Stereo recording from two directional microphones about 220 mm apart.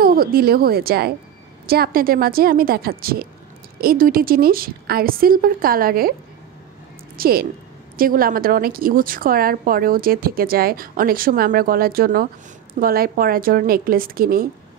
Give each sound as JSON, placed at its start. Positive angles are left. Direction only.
{"t": 0.0, "sound": "a woman's voice", "side_deg": -40}
{"t": 7.2, "sound": "a woman's voice", "side_deg": -45}